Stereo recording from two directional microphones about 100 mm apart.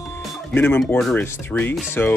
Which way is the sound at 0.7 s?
5° left (ahead or behind).